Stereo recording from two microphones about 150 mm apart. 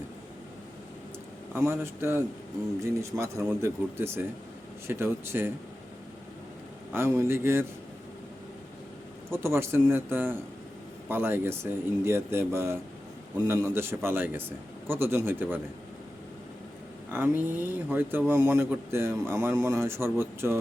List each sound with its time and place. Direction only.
1.5 s a man's voice: 15° right (ahead or behind)
6.9 s a man's voice: 15° right (ahead or behind)
9.3 s a man's voice: 15° right (ahead or behind)
17.1 s a man's voice: 15° right (ahead or behind)